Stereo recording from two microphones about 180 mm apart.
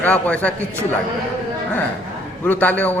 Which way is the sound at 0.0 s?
10° left (ahead or behind).